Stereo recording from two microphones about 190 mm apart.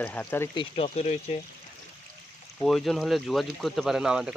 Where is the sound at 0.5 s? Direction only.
30° left (ahead or behind).